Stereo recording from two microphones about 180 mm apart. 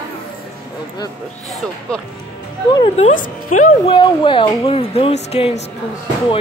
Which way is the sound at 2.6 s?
25° left (ahead or behind).